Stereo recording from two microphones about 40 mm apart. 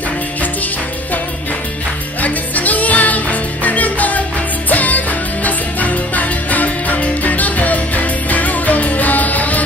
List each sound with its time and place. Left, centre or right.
2.2 s music: left